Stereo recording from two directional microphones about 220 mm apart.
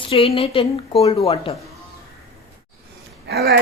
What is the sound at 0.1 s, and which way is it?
A woman's voice, 25° left (ahead or behind).